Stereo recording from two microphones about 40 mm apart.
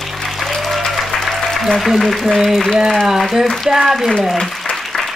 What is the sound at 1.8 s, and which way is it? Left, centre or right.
Speech, centre.